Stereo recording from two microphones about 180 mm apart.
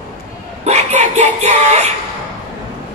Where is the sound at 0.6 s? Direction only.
40° right (ahead or behind).